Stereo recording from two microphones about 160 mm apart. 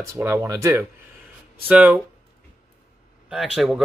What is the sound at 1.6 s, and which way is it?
Speech, 10° right (ahead or behind).